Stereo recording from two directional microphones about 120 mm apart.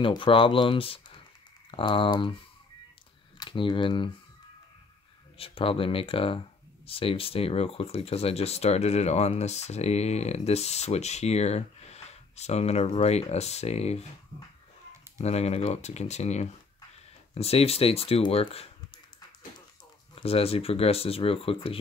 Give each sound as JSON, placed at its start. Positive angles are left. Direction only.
{"t": 0.0, "sound": "speech", "side_deg": 45}
{"t": 3.3, "sound": "speech", "side_deg": 40}
{"t": 5.4, "sound": "speech", "side_deg": 50}
{"t": 15.1, "sound": "speech", "side_deg": 60}
{"t": 17.3, "sound": "speech", "side_deg": 60}
{"t": 20.2, "sound": "speech", "side_deg": 55}